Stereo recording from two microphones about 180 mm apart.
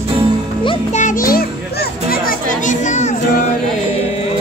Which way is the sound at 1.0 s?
45° left (ahead or behind).